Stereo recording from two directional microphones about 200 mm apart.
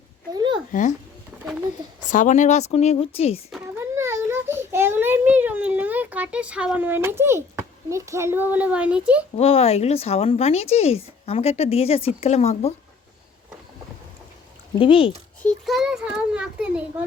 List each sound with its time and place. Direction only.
0.3 s a sound: 20° right (ahead or behind)
0.7 s speech: 40° left (ahead or behind)
2.0 s speech: 40° left (ahead or behind)
3.8 s a sound: 15° right (ahead or behind)
7.9 s a child's voice: 15° right (ahead or behind)
9.3 s speech: 30° left (ahead or behind)
14.8 s speech: 25° left (ahead or behind)
15.4 s a child's voice: 5° left (ahead or behind)